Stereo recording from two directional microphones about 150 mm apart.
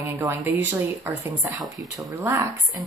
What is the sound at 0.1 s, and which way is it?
A woman's voice, 10° right (ahead or behind).